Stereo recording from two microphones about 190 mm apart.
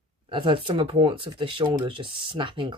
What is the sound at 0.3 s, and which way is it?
Speech, 25° right (ahead or behind).